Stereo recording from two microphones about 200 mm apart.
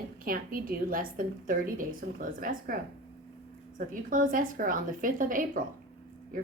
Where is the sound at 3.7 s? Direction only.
40° right (ahead or behind).